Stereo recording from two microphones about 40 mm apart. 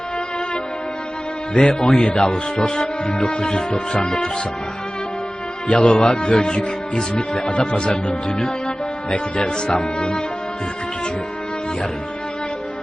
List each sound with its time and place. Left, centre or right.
1.5 s speech: centre
5.6 s speech: left